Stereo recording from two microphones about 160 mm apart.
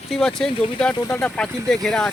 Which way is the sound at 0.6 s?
35° left (ahead or behind).